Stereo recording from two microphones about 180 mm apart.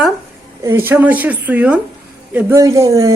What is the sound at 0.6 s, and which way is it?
A woman's voice, 10° right (ahead or behind).